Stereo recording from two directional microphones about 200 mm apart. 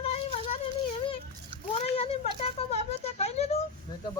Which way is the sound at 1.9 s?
30° left (ahead or behind).